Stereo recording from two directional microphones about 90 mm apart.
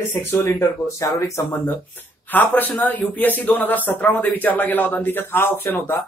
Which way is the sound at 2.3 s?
20° left (ahead or behind).